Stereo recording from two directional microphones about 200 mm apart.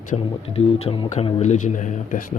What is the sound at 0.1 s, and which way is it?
Speech, 30° left (ahead or behind).